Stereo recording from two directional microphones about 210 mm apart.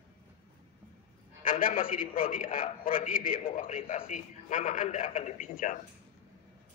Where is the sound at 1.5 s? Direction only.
40° left (ahead or behind).